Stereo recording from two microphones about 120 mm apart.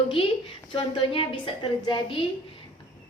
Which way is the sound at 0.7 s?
45° left (ahead or behind).